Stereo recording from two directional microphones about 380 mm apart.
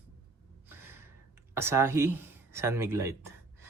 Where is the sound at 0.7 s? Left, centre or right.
Centre.